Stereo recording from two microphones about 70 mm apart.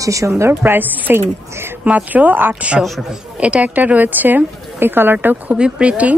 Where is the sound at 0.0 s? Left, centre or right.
Right.